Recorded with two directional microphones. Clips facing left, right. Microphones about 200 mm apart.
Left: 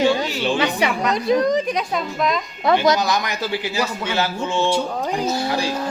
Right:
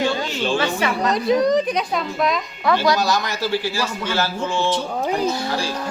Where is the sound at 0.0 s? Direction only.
15° left (ahead or behind).